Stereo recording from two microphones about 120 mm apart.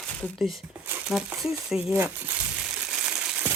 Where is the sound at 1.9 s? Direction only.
20° right (ahead or behind).